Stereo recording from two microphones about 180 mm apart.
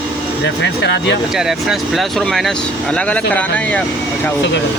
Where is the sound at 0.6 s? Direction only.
75° left (ahead or behind).